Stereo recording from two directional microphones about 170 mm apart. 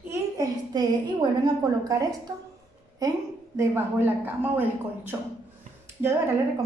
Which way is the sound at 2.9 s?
20° right (ahead or behind).